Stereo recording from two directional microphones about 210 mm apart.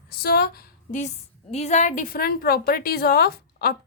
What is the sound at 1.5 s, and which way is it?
A woman's voice, 35° left (ahead or behind).